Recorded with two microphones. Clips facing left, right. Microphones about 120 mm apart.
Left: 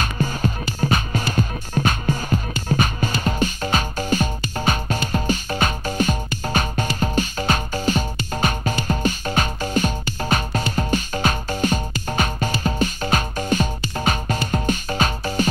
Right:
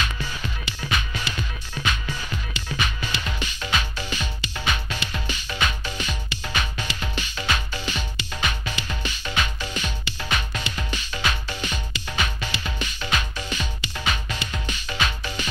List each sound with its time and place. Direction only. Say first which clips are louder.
0.0 s music: left 7 dB; 45° left (ahead or behind)